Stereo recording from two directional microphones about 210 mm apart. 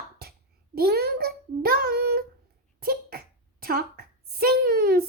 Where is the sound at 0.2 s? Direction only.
50° right (ahead or behind).